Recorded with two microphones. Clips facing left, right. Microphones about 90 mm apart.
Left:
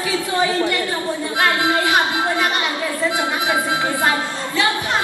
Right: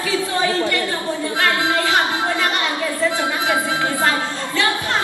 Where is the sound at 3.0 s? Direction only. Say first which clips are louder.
Even; 20° left (ahead or behind).